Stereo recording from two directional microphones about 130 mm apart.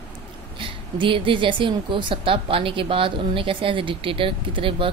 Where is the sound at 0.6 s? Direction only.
40° right (ahead or behind).